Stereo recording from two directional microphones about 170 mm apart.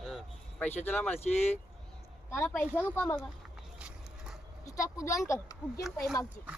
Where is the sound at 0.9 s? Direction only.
10° left (ahead or behind).